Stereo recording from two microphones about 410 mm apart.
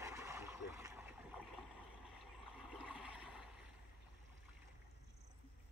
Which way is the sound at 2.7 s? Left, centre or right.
Centre.